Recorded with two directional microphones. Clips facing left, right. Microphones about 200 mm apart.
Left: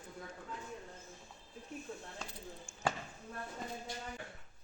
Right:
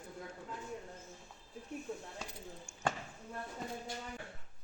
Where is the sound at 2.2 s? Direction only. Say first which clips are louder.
Right 1 dB; 15° right (ahead or behind).